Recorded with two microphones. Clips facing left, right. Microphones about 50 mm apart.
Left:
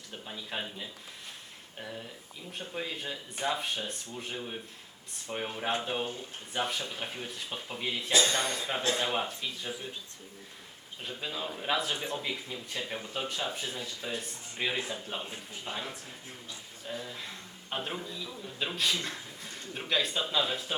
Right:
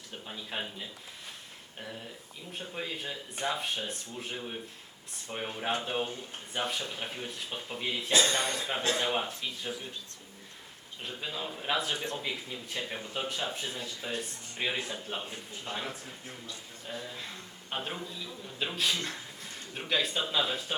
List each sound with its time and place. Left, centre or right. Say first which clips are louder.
0.3 s speech: even; centre
2.5 s speech: even; centre
8.3 s a man's voice: even; right
8.5 s speech: even; centre
11.0 s speech: left 1 dB; centre
15.7 s speech: even; centre
16.8 s a man's voice: left 1 dB; centre